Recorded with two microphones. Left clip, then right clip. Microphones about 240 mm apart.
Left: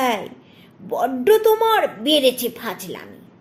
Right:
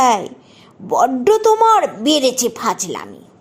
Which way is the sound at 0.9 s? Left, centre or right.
Right.